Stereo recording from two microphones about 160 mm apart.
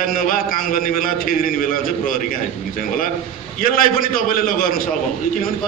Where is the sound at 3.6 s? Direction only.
60° left (ahead or behind).